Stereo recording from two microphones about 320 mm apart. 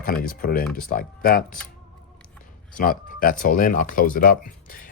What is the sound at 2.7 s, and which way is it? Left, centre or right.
Speech, left.